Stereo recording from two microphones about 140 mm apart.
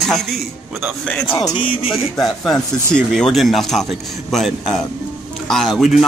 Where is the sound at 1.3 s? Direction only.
30° left (ahead or behind).